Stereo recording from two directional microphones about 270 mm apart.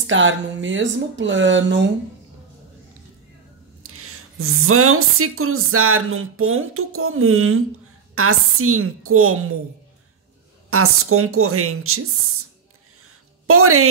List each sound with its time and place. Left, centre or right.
0.0 s a woman's voice: right
3.8 s a woman's voice: right
10.7 s a woman's voice: right
13.0 s a sound: right